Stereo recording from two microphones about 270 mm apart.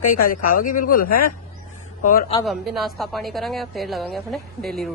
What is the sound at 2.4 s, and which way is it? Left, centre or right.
A woman's voice, centre.